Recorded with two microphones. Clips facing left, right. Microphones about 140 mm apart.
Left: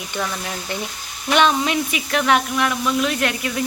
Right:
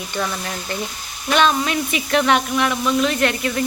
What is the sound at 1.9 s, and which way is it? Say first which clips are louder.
Speech: right 3 dB; centre (ahead or behind).